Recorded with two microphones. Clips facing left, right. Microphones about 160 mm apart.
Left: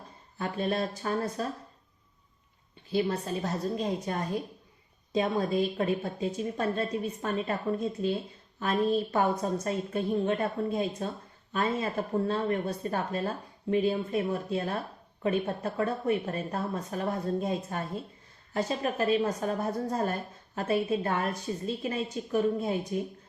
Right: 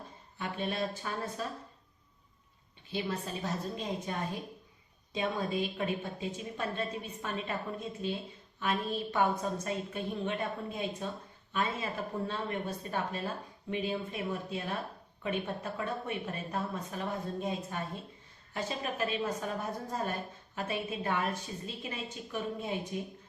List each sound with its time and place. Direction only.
0.3 s a woman's voice: 40° left (ahead or behind)
2.9 s a woman's voice: 40° left (ahead or behind)